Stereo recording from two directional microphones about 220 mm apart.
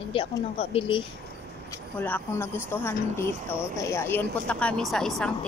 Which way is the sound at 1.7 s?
10° left (ahead or behind).